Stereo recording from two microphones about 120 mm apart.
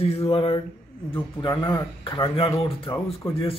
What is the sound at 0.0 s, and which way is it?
Speech, 55° left (ahead or behind).